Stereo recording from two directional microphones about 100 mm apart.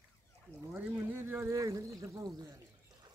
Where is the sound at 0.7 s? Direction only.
15° right (ahead or behind).